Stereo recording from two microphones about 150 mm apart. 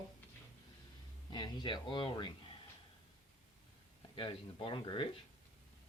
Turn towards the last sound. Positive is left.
turn(degrees=35)  # may be behind; listen again after turning